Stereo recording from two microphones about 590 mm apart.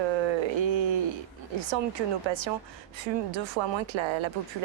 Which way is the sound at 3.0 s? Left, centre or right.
Right.